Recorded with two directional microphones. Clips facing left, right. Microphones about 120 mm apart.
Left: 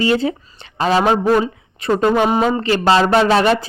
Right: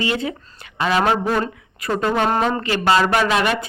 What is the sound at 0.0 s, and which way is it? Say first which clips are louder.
Speech: left 6 dB; 35° left (ahead or behind).